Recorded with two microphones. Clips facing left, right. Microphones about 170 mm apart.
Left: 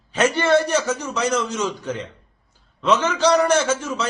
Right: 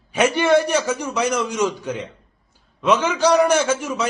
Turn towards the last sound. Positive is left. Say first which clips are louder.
# right 1 dB
turn(degrees=-10)  # may be behind; listen again after turning